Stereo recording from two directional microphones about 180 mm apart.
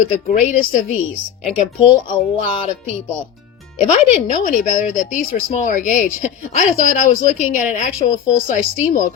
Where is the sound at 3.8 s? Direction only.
40° left (ahead or behind).